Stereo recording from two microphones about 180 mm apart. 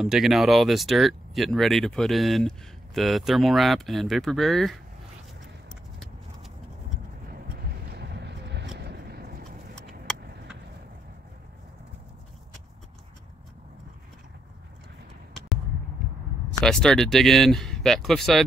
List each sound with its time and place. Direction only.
0.0 s speech: centre (ahead or behind)
5.9 s horse: centre (ahead or behind)
7.9 s a sound: 65° right (ahead or behind)
9.8 s vehicle: centre (ahead or behind)
16.6 s speech: 5° left (ahead or behind)